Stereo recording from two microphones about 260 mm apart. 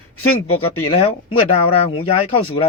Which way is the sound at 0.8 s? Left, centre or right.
Left.